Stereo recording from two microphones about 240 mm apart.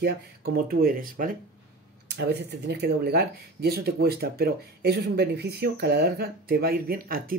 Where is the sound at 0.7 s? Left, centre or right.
Right.